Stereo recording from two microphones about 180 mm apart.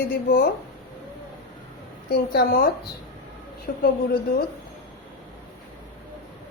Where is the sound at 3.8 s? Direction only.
60° left (ahead or behind).